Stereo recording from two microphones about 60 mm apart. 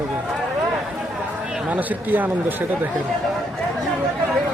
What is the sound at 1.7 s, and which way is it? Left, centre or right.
Speech, right.